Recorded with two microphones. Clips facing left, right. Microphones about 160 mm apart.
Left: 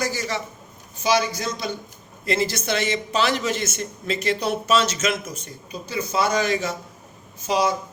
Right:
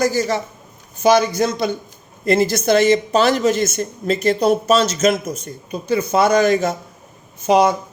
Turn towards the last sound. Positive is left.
turn(degrees=-60)  # may be behind; listen again after turning